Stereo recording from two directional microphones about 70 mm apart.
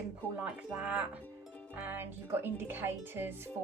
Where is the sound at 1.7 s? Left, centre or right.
Right.